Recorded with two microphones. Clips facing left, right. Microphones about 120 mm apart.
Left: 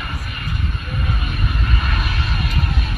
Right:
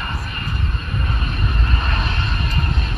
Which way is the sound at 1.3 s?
5° left (ahead or behind).